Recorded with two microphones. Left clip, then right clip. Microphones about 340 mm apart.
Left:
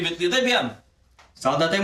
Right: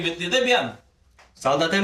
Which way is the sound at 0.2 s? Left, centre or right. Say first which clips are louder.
Even; left.